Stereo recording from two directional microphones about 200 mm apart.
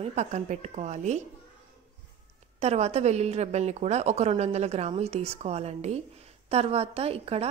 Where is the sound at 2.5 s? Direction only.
35° right (ahead or behind).